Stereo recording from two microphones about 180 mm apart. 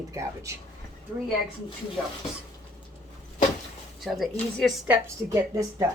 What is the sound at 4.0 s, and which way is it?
Speech, centre (ahead or behind).